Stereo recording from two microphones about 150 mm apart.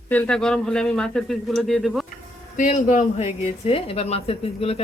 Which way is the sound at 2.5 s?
55° left (ahead or behind).